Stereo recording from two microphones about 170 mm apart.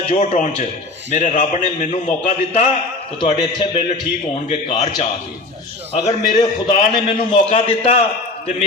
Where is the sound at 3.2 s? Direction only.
30° left (ahead or behind).